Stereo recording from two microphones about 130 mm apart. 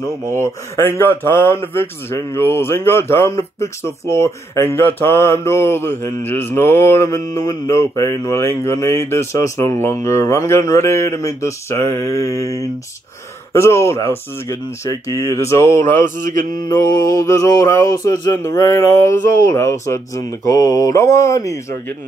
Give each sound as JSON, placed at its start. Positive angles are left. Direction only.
{"t": 0.4, "sound": "a man's voice", "side_deg": 20}